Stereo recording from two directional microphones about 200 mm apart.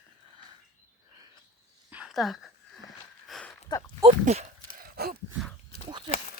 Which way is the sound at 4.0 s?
35° right (ahead or behind).